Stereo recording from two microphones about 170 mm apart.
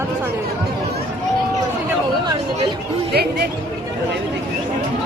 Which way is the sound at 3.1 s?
70° right (ahead or behind).